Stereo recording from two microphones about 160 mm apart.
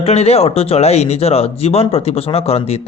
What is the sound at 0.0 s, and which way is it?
A man's voice, 40° left (ahead or behind).